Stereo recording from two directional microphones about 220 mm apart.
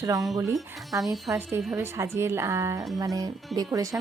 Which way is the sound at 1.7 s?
15° right (ahead or behind).